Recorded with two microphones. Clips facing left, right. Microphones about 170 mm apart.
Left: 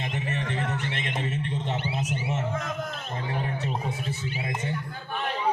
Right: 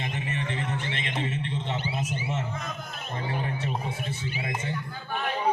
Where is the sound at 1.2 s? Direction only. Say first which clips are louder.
Left 1 dB; 45° left (ahead or behind).